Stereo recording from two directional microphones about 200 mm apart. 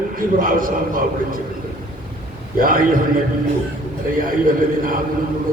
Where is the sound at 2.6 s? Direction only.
45° right (ahead or behind).